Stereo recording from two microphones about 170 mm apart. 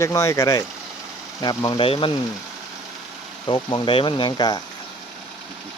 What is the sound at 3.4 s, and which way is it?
Speech, 30° left (ahead or behind).